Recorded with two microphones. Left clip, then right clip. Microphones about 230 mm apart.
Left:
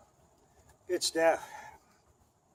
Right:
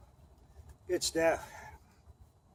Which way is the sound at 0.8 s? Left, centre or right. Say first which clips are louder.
Left 2 dB; centre.